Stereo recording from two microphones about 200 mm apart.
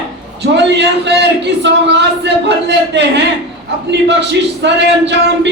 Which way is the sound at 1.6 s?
60° right (ahead or behind).